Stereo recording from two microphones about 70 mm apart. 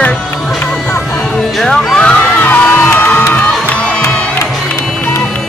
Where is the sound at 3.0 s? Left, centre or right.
Left.